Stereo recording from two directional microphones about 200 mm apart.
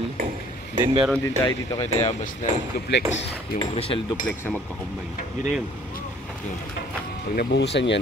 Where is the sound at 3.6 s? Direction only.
25° left (ahead or behind).